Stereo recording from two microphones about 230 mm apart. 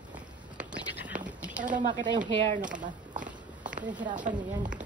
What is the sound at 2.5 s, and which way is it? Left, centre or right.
Speech, right.